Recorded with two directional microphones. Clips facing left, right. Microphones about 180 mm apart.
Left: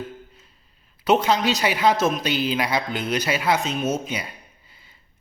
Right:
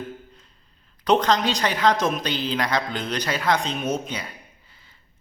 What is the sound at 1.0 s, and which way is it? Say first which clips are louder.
A man's voice: left 1 dB; 5° left (ahead or behind).